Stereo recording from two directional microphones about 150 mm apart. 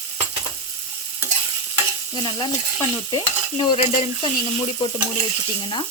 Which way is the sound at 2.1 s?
30° left (ahead or behind).